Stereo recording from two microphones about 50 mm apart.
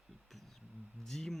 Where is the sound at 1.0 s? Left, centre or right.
Centre.